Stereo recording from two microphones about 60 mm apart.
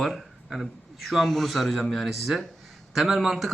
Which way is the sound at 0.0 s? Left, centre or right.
Centre.